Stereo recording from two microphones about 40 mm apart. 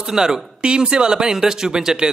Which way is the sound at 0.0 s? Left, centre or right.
Centre.